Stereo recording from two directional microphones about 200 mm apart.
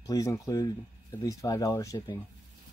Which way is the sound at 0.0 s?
15° left (ahead or behind).